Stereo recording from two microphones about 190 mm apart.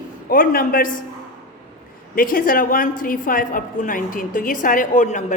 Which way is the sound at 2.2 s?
45° left (ahead or behind).